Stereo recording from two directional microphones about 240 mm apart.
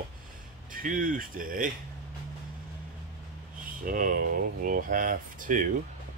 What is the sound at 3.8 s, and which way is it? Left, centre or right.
Speech, right.